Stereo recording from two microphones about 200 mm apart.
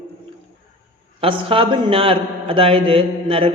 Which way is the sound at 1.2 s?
25° right (ahead or behind).